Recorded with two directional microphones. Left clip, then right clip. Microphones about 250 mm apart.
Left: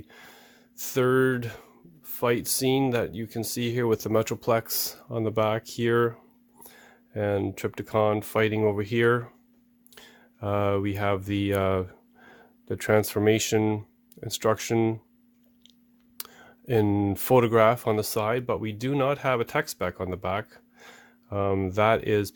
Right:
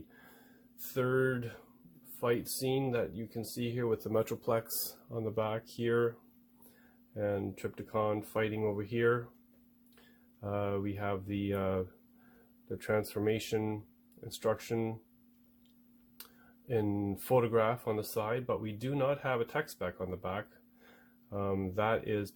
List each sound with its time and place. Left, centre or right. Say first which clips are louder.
0.9 s speech: left 9 dB; left
7.1 s speech: left 8 dB; left
10.4 s speech: left 10 dB; left
16.6 s speech: left 10 dB; left